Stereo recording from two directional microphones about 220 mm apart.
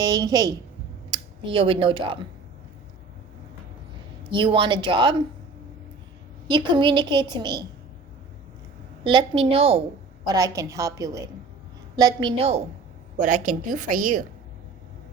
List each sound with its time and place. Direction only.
0.0 s a woman's voice: 15° right (ahead or behind)
4.3 s a woman's voice: 20° right (ahead or behind)
6.5 s a woman's voice: 20° right (ahead or behind)
9.0 s a woman's voice: 25° right (ahead or behind)
10.2 s a woman's voice: 15° right (ahead or behind); by 14.3 s 35° right (ahead or behind)